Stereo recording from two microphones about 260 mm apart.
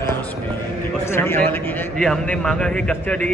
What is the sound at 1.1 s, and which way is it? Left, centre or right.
A man's voice, centre.